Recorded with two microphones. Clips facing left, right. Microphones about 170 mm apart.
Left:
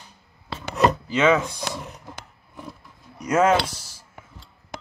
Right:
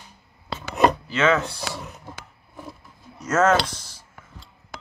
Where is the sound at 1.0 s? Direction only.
15° left (ahead or behind).